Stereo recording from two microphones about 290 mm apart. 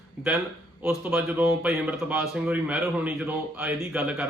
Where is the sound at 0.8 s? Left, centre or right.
Centre.